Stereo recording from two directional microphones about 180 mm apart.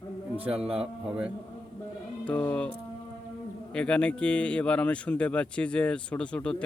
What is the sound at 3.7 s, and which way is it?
Speech, 5° left (ahead or behind).